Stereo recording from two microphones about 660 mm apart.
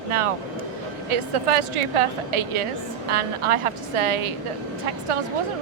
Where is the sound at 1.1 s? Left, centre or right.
Right.